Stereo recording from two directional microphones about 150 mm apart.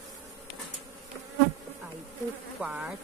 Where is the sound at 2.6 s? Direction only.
10° right (ahead or behind).